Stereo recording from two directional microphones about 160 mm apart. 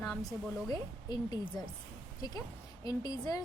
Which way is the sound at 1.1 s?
25° left (ahead or behind).